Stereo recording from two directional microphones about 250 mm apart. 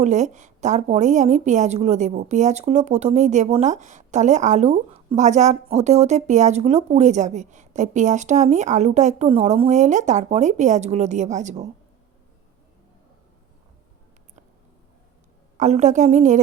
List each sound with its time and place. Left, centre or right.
0.0 s a woman's voice: right
15.5 s a woman's voice: right